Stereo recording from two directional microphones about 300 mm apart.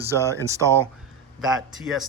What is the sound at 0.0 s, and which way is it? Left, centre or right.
Speech, centre.